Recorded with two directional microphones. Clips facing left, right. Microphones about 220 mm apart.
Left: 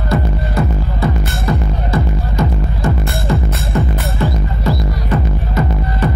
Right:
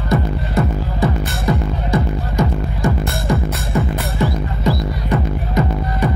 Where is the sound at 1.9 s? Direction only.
15° right (ahead or behind).